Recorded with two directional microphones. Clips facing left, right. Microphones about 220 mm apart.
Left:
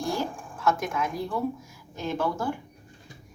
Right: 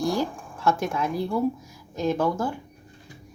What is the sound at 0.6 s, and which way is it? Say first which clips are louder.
Speech: right 2 dB; 30° right (ahead or behind).